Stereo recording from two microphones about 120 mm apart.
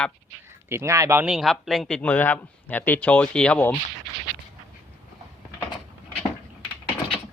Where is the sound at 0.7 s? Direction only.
25° right (ahead or behind).